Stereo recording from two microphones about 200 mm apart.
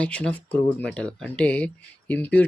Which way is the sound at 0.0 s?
5° left (ahead or behind).